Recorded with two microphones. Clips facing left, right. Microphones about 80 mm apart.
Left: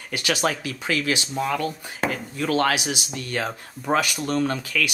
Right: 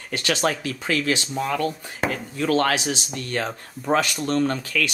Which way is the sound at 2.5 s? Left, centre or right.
Centre.